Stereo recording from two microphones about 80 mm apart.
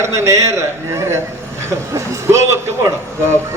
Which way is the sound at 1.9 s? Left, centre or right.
Right.